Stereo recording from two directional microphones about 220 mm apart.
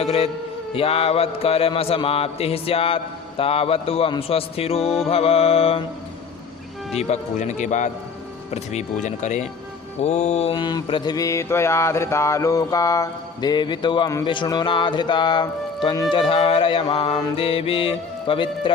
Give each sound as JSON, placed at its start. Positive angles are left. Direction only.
{"t": 0.7, "sound": "mantra", "side_deg": 25}
{"t": 6.9, "sound": "speech", "side_deg": 30}
{"t": 10.0, "sound": "mantra", "side_deg": 30}